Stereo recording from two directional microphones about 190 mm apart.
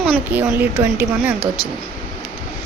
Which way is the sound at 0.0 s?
10° right (ahead or behind).